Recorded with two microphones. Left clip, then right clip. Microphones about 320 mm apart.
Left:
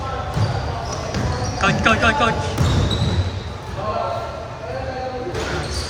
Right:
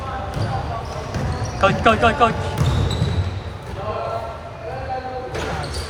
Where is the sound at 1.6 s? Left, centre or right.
Centre.